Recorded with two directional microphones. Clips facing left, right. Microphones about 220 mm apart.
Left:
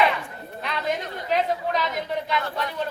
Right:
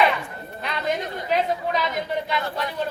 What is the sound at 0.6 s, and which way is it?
A woman's voice, centre (ahead or behind).